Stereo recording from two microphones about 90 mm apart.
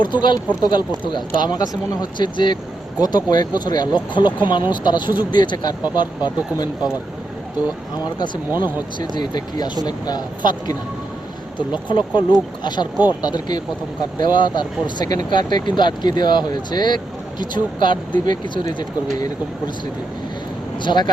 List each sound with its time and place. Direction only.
0.0 s speech: 60° left (ahead or behind)
8.0 s speech: 55° left (ahead or behind)
8.4 s speech: 20° right (ahead or behind)
9.0 s speech: 55° left (ahead or behind)
11.5 s speech: 55° left (ahead or behind)
20.7 s speech: 55° left (ahead or behind)